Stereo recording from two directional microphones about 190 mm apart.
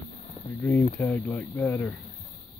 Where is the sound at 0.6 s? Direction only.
10° left (ahead or behind).